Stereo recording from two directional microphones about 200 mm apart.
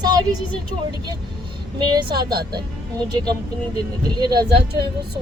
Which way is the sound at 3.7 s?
20° right (ahead or behind).